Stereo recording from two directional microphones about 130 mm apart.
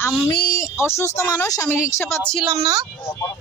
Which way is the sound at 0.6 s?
20° left (ahead or behind).